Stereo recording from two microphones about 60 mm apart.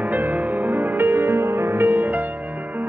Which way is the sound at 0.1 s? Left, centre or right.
Right.